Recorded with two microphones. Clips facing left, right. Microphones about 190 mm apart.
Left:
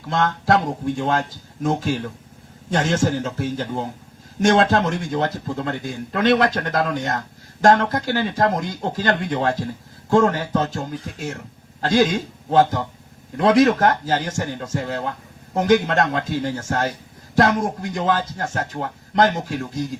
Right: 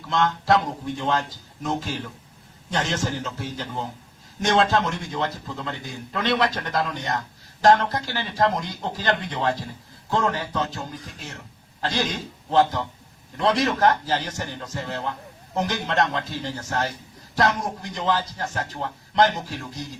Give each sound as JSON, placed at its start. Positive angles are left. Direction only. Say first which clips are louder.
{"t": 0.1, "sound": "speech", "louder": "left 2 dB", "side_deg": 50}